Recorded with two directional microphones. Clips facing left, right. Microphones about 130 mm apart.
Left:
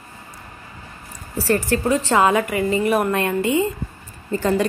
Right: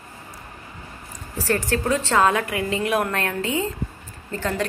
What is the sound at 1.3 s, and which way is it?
A woman's voice, 10° left (ahead or behind).